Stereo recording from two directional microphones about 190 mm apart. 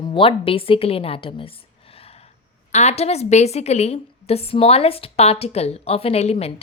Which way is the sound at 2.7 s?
35° left (ahead or behind).